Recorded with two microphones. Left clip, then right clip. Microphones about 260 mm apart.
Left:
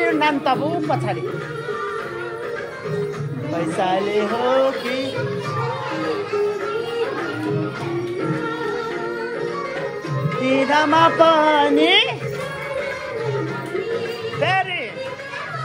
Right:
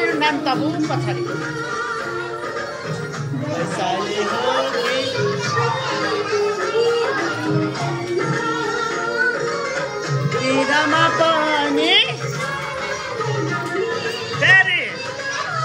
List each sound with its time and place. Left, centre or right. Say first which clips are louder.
0.0 s a sound: even; left
10.5 s music: left 1 dB; left
14.4 s music: right 7 dB; centre